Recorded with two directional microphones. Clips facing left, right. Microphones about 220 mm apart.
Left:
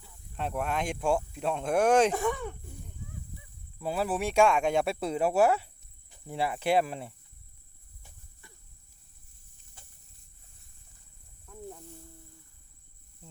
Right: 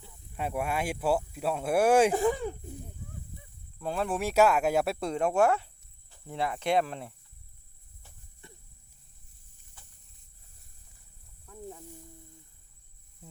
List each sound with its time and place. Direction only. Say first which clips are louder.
0.3 s speech: even; 10° right (ahead or behind)
2.1 s speech: right 4 dB; 30° right (ahead or behind)
3.8 s speech: left 1 dB; 5° left (ahead or behind)
11.4 s snake: even; centre (ahead or behind)